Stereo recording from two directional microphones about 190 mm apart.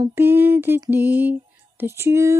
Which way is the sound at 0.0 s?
10° right (ahead or behind).